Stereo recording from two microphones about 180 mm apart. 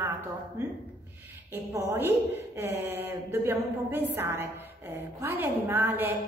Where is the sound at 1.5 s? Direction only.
15° right (ahead or behind).